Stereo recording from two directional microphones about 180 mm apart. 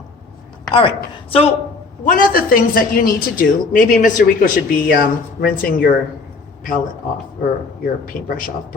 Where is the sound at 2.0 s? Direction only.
50° left (ahead or behind).